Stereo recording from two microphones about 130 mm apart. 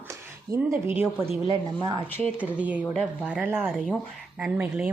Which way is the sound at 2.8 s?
5° left (ahead or behind).